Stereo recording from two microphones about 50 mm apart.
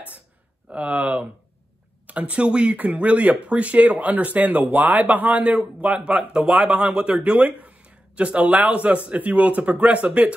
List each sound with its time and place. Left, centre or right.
0.7 s speech: right
2.0 s speech: right